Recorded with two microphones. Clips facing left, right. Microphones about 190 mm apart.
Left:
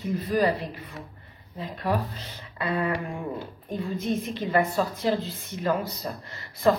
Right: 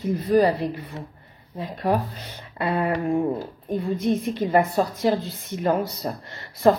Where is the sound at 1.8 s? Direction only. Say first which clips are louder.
Right 4 dB; 45° right (ahead or behind).